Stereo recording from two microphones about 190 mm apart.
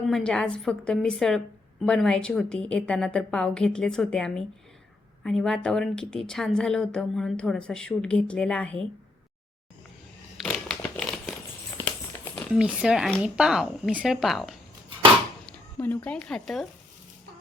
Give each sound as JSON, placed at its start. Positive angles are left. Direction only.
{"t": 0.1, "sound": "a woman's voice", "side_deg": 5}
{"t": 10.3, "sound": "a sound", "side_deg": 5}
{"t": 12.5, "sound": "a woman's voice", "side_deg": -5}